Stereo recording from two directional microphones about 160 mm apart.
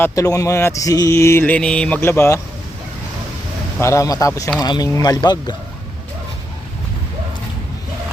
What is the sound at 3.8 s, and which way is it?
Speech, 20° left (ahead or behind).